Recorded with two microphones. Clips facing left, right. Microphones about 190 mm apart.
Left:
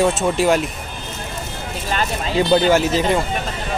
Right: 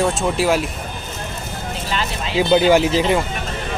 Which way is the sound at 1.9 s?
45° left (ahead or behind).